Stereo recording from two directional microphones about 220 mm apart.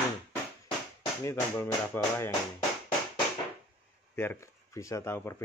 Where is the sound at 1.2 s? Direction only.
15° left (ahead or behind).